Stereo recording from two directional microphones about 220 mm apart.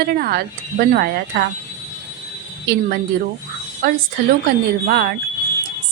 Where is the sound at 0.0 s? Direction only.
45° right (ahead or behind).